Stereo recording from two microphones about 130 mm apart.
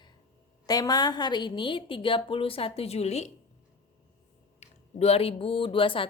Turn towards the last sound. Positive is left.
turn(degrees=40)  # may be behind; listen again after turning